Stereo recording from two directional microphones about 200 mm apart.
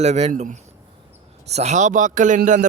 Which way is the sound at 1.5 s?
35° right (ahead or behind).